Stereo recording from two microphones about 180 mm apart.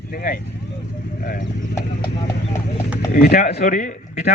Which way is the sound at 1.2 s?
50° left (ahead or behind).